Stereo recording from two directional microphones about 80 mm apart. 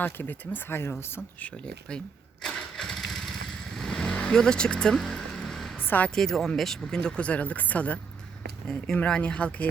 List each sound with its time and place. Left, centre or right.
0.0 s speech: left
1.4 s speech: centre
2.4 s engine starting: centre
3.8 s vehicle: centre
5.8 s a sound: left
6.1 s speech: centre
8.6 s speech: centre